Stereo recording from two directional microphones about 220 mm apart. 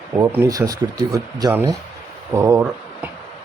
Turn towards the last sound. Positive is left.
turn(degrees=-15)  # may be behind; listen again after turning